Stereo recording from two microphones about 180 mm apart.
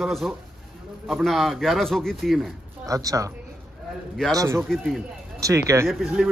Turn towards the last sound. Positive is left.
turn(degrees=0)  # may be behind; listen again after turning